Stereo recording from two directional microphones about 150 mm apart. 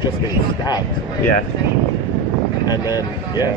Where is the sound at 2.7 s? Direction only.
25° left (ahead or behind).